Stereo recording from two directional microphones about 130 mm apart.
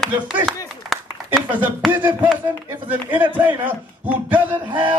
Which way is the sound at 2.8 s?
15° right (ahead or behind).